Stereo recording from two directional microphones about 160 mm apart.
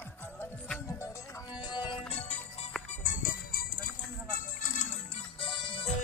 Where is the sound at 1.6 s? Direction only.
25° left (ahead or behind).